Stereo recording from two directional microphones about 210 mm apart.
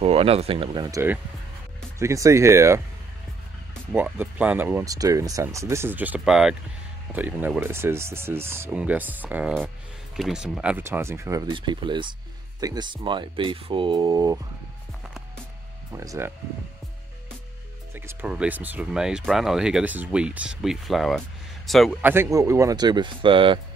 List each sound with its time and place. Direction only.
0.0 s speech: 30° right (ahead or behind)
0.9 s speech: 10° right (ahead or behind)
3.9 s speech: 10° right (ahead or behind)
15.9 s speech: 15° right (ahead or behind)
17.9 s speech: 5° right (ahead or behind)
22.1 s speech: 15° right (ahead or behind)